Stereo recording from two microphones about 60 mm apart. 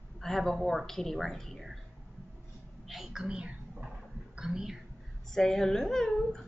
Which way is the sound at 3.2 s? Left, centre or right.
Centre.